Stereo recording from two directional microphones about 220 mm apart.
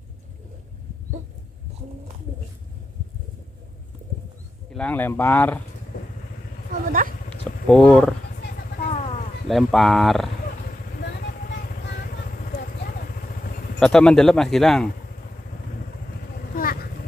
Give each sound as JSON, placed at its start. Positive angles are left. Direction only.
{"t": 4.7, "sound": "speech", "side_deg": 5}
{"t": 6.7, "sound": "a sound", "side_deg": -40}
{"t": 7.2, "sound": "a sound", "side_deg": 5}
{"t": 9.5, "sound": "speech", "side_deg": 0}
{"t": 13.7, "sound": "speech", "side_deg": 5}
{"t": 16.3, "sound": "vehicle", "side_deg": 40}